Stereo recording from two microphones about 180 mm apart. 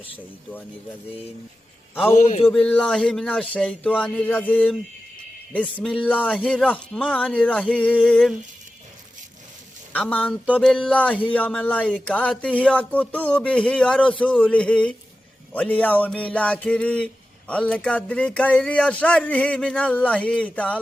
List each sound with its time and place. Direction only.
2.1 s a man's voice: 40° left (ahead or behind)
2.5 s speech: 5° left (ahead or behind)
9.9 s speech: 10° left (ahead or behind)